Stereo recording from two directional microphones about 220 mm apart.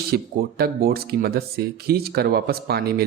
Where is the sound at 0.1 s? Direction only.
45° right (ahead or behind).